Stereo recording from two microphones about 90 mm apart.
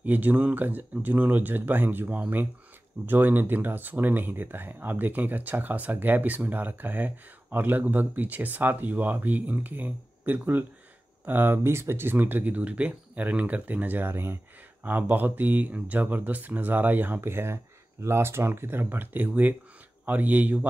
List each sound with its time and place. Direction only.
0.0 s speech: 20° right (ahead or behind)